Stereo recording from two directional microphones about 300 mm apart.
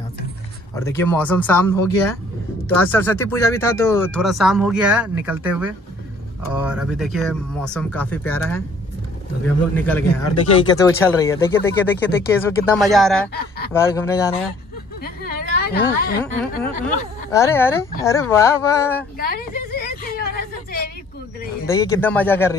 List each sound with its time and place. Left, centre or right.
0.7 s speech: centre
9.8 s speech: centre
15.0 s a sound: left
16.2 s speech: centre
19.1 s a sound: left
21.6 s speech: centre